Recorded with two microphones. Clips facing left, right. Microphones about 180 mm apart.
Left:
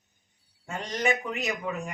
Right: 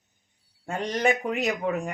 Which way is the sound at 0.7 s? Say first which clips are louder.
Right 4 dB; 55° right (ahead or behind).